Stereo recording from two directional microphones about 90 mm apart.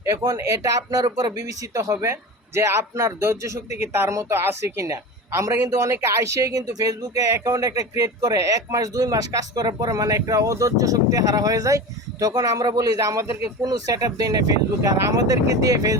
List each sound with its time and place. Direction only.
0.2 s speech: 45° right (ahead or behind)
13.1 s speech: 30° right (ahead or behind)
13.6 s speech: 45° right (ahead or behind)